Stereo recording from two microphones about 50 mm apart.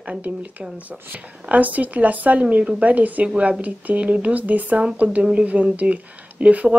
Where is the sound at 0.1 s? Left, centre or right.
Right.